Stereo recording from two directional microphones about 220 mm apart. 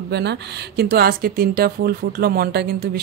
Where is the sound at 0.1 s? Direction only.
50° right (ahead or behind).